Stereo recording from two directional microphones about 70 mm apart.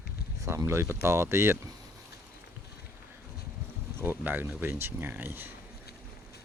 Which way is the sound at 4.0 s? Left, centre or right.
Right.